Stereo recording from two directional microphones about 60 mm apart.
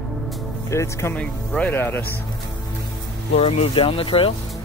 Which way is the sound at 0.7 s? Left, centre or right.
Left.